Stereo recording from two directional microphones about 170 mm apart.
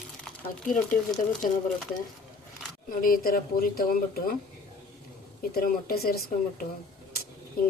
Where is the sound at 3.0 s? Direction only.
60° left (ahead or behind).